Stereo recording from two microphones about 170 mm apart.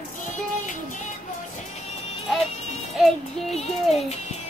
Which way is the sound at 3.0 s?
Centre (ahead or behind).